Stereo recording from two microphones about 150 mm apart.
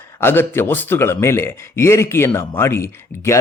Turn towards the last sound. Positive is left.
turn(degrees=20)  # may be behind; listen again after turning